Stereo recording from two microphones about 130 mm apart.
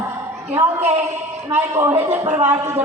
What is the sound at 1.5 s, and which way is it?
A man's voice, 15° right (ahead or behind).